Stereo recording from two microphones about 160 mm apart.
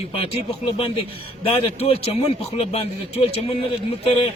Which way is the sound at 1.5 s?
35° left (ahead or behind).